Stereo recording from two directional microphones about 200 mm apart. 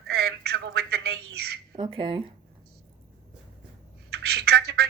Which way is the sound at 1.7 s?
25° right (ahead or behind).